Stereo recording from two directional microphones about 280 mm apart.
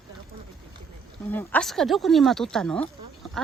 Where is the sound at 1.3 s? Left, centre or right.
Centre.